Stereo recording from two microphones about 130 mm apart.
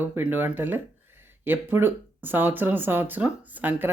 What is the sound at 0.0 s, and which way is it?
Speech, 15° right (ahead or behind).